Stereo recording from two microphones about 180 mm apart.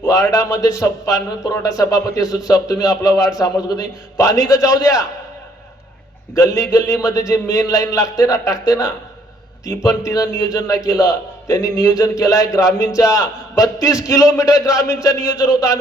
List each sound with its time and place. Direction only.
0.0 s a man's voice: 20° left (ahead or behind)
6.3 s a man's voice: 20° left (ahead or behind)